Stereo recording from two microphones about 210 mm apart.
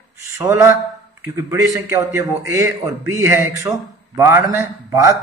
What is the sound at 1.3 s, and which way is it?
A man's voice, 15° right (ahead or behind).